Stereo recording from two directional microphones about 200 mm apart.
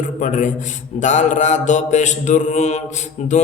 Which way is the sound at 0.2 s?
40° left (ahead or behind).